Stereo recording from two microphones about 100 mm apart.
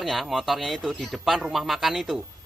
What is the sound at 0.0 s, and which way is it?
A man's voice, centre (ahead or behind).